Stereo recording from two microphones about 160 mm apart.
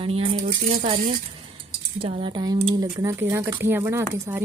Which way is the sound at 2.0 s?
35° right (ahead or behind).